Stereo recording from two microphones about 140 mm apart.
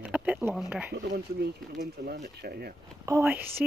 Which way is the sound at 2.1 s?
80° right.